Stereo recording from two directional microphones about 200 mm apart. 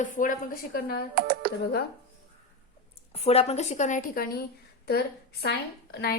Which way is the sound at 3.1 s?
30° left (ahead or behind).